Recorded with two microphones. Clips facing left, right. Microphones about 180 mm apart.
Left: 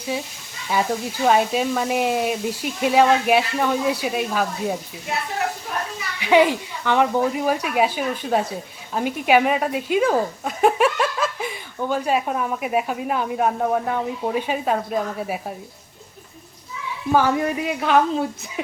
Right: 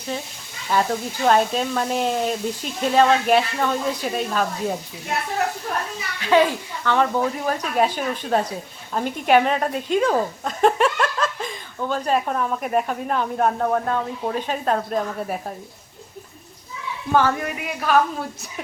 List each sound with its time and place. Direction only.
0.7 s speech: 10° left (ahead or behind)
6.1 s speech: 15° left (ahead or behind)
17.1 s speech: 10° left (ahead or behind)
17.4 s a woman's voice: 25° left (ahead or behind)